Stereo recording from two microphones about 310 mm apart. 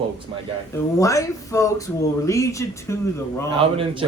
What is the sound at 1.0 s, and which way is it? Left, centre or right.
Speech, centre.